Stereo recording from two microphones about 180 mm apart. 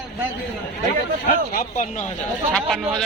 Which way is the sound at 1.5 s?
45° left (ahead or behind).